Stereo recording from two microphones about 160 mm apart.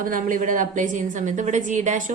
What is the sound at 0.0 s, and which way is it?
A woman's voice, 55° right (ahead or behind).